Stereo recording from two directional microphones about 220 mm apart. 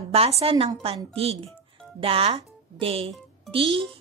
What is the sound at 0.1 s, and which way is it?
A woman's voice, 25° right (ahead or behind).